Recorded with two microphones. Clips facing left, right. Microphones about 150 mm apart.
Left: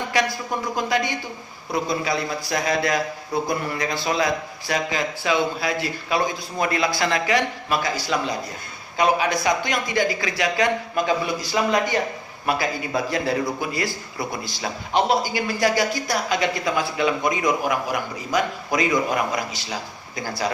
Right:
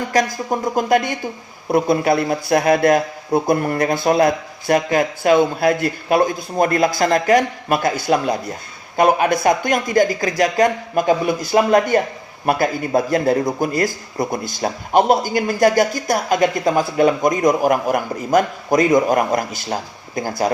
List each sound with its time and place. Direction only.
0.1 s speech: 45° right (ahead or behind)